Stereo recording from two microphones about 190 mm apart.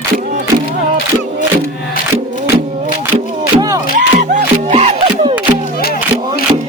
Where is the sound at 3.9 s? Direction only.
40° right (ahead or behind).